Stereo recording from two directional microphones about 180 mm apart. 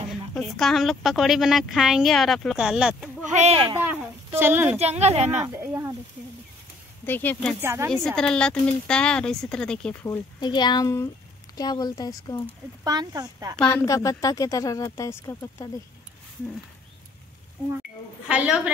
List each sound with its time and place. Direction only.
0.3 s a woman's voice: centre (ahead or behind)
3.3 s a woman's voice: 35° right (ahead or behind)
3.7 s speech: 10° right (ahead or behind)
4.7 s a woman's voice: 35° right (ahead or behind)
5.4 s speech: 10° right (ahead or behind)
7.1 s speech: 10° left (ahead or behind)
7.6 s speech: 15° right (ahead or behind)
7.9 s a woman's voice: 5° left (ahead or behind)
10.0 s speech: 20° left (ahead or behind)
12.4 s speech: 20° right (ahead or behind)
13.7 s speech: 20° left (ahead or behind)
18.3 s speech: 5° right (ahead or behind)